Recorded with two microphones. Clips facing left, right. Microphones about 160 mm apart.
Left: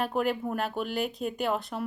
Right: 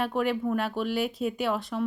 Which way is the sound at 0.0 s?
Centre (ahead or behind).